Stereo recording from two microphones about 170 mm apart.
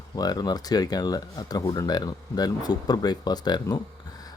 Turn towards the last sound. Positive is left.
turn(degrees=25)  # may be behind; listen again after turning